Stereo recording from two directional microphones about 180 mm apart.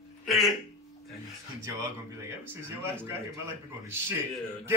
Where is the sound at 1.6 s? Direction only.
15° right (ahead or behind).